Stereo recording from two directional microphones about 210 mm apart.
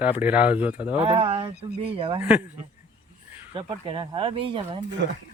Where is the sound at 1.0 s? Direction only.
25° right (ahead or behind).